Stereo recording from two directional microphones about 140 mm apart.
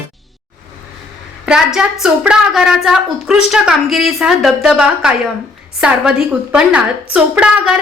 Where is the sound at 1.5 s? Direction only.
5° right (ahead or behind).